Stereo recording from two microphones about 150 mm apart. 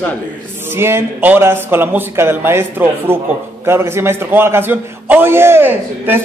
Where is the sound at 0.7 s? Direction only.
15° right (ahead or behind).